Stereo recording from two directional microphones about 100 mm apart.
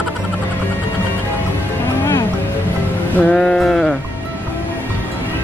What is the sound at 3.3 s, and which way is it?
Sheep, 5° left (ahead or behind).